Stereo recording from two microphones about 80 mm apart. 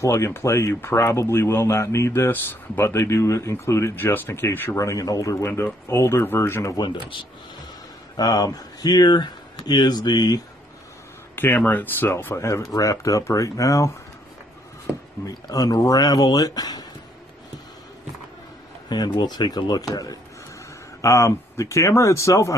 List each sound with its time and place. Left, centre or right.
0.0 s speech: left
4.7 s speech: left
6.7 s speech: left
8.2 s speech: left
11.3 s speech: left
14.9 s speech: centre
15.5 s speech: left
18.9 s speech: left
19.9 s speech: left
21.0 s speech: left